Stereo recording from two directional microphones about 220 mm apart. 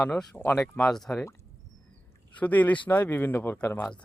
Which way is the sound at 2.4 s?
5° left (ahead or behind).